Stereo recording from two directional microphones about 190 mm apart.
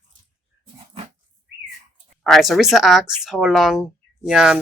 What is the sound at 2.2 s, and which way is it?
Speech, centre (ahead or behind).